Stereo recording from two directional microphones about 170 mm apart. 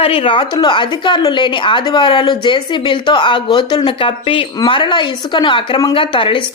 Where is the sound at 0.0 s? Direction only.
30° left (ahead or behind).